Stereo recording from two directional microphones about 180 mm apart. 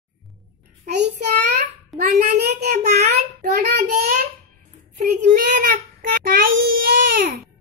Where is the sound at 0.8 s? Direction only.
70° right (ahead or behind).